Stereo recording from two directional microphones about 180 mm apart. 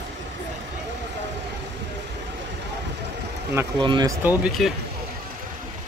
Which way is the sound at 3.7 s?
25° right (ahead or behind).